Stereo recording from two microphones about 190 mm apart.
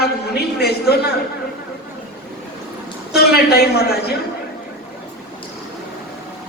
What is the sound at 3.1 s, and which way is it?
A man's voice, 55° left (ahead or behind).